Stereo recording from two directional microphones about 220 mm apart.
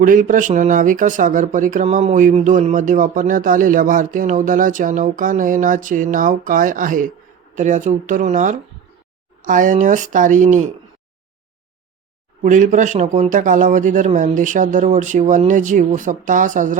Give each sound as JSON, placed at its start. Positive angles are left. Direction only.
{"t": 0.0, "sound": "speech", "side_deg": -40}
{"t": 12.4, "sound": "speech", "side_deg": -35}